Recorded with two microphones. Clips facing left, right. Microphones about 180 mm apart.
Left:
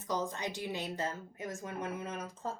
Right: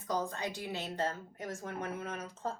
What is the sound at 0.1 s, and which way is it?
A woman's voice, 20° left (ahead or behind).